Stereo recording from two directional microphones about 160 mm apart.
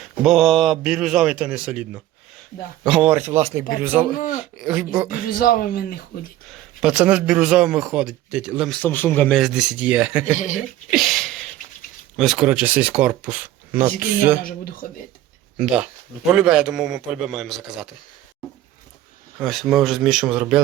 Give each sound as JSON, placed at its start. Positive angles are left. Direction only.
{"t": 0.0, "sound": "a man's voice", "side_deg": 0}
{"t": 4.2, "sound": "speech", "side_deg": 55}
{"t": 4.5, "sound": "speech", "side_deg": -5}
{"t": 5.2, "sound": "speech", "side_deg": 65}
{"t": 6.5, "sound": "a man's voice", "side_deg": -5}
{"t": 8.7, "sound": "a man's voice", "side_deg": 10}
{"t": 9.4, "sound": "speech", "side_deg": -5}
{"t": 10.3, "sound": "speech", "side_deg": 50}
{"t": 10.9, "sound": "a sound", "side_deg": 0}
{"t": 12.1, "sound": "speech", "side_deg": 0}
{"t": 14.4, "sound": "speech", "side_deg": 65}
{"t": 15.5, "sound": "a man's voice", "side_deg": -5}
{"t": 19.4, "sound": "a man's voice", "side_deg": 0}